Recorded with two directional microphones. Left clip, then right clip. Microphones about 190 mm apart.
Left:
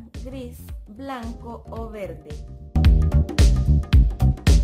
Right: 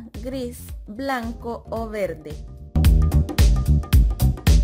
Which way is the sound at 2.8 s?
Centre (ahead or behind).